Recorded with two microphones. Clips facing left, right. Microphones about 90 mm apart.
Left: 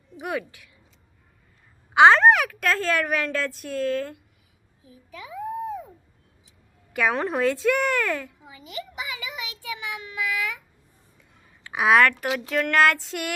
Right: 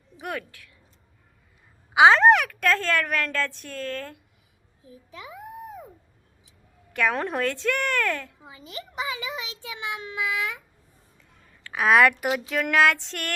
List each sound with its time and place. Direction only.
0.2 s a woman's voice: 5° left (ahead or behind)
1.9 s a woman's voice: 5° right (ahead or behind)
6.9 s a woman's voice: centre (ahead or behind)
8.4 s child singing: 30° right (ahead or behind)
11.2 s a sound: 10° left (ahead or behind)
11.9 s a woman's voice: 5° right (ahead or behind)